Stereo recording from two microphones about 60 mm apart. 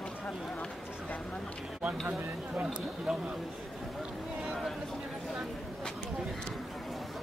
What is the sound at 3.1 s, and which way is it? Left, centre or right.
Speech, centre.